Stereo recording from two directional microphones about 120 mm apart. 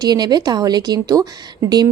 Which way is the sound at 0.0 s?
35° right (ahead or behind).